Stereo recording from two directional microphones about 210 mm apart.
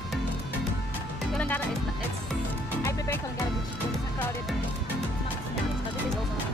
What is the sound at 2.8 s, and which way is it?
Music, 15° left (ahead or behind).